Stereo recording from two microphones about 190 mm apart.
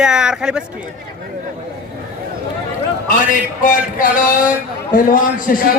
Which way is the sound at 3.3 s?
45° left (ahead or behind).